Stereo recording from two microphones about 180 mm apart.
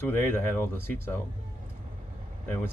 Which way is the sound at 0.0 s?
10° left (ahead or behind).